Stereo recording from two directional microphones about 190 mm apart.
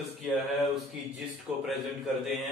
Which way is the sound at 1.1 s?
Centre (ahead or behind).